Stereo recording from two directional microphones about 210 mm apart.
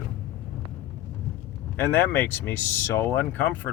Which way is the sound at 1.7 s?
10° left (ahead or behind).